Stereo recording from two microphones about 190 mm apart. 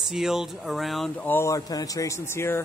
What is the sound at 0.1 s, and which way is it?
Speech, centre (ahead or behind).